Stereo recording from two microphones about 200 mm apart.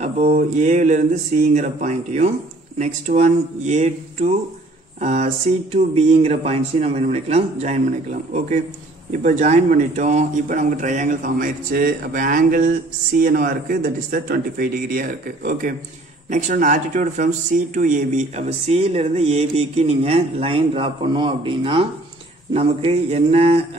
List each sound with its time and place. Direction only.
0.3 s a man's voice: 40° right (ahead or behind)